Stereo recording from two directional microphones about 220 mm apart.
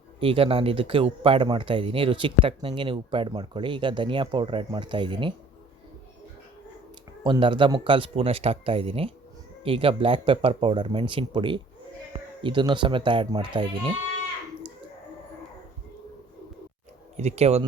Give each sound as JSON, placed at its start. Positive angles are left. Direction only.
{"t": 0.2, "sound": "speech", "side_deg": -25}
{"t": 7.3, "sound": "speech", "side_deg": -20}
{"t": 17.2, "sound": "speech", "side_deg": -30}